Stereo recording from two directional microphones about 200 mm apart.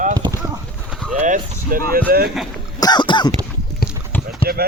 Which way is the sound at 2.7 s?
20° left (ahead or behind).